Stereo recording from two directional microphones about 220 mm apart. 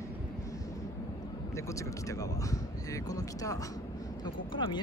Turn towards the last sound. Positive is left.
turn(degrees=20)  # may be behind; listen again after turning